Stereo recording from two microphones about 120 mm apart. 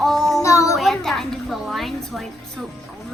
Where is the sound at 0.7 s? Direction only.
Centre (ahead or behind).